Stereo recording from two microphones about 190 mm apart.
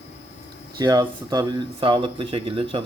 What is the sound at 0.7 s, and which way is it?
Speech, 20° right (ahead or behind).